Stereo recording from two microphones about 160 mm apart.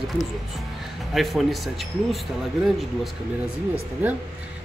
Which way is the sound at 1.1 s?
Centre (ahead or behind).